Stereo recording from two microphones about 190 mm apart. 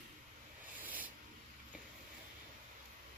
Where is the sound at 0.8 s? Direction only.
10° right (ahead or behind).